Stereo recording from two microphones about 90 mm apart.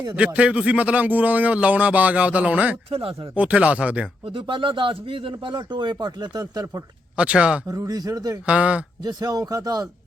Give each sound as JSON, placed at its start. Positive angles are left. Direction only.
{"t": 0.3, "sound": "speech", "side_deg": -15}
{"t": 2.9, "sound": "speech", "side_deg": -90}
{"t": 3.3, "sound": "speech", "side_deg": -15}
{"t": 4.3, "sound": "speech", "side_deg": -70}
{"t": 7.2, "sound": "speech", "side_deg": -10}
{"t": 7.7, "sound": "a man's voice", "side_deg": -40}
{"t": 8.4, "sound": "speech", "side_deg": -15}
{"t": 9.0, "sound": "a man's voice", "side_deg": -45}